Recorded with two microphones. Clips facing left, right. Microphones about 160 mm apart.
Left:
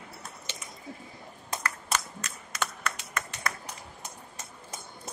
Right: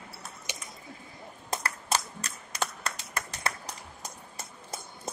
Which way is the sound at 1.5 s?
35° right (ahead or behind).